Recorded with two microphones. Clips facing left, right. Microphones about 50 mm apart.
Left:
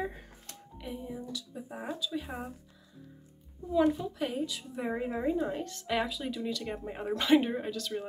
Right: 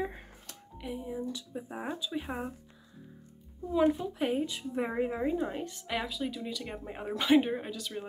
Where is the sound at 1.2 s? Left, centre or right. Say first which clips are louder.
Right 2 dB; right.